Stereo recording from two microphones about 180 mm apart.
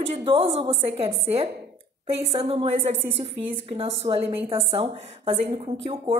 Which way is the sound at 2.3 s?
30° right (ahead or behind).